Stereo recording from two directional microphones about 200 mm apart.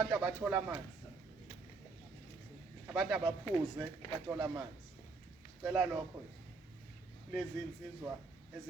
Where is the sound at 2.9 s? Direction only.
Centre (ahead or behind).